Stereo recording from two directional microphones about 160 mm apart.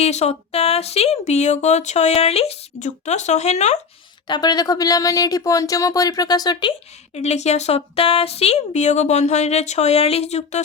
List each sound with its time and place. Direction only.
0.0 s speech: 45° left (ahead or behind)
4.3 s speech: 25° left (ahead or behind)
7.1 s speech: 45° left (ahead or behind)